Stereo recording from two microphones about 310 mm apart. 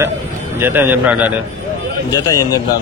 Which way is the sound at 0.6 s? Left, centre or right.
Centre.